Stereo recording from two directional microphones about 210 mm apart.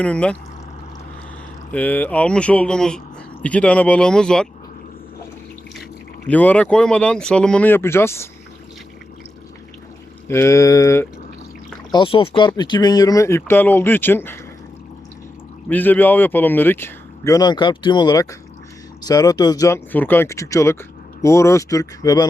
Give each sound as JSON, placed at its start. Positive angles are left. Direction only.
{"t": 0.0, "sound": "speech", "side_deg": 5}
{"t": 1.7, "sound": "speech", "side_deg": 5}
{"t": 6.2, "sound": "speech", "side_deg": 5}
{"t": 10.2, "sound": "speech", "side_deg": 10}
{"t": 15.7, "sound": "speech", "side_deg": 10}